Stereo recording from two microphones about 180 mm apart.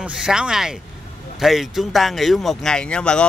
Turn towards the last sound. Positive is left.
turn(degrees=5)  # may be behind; listen again after turning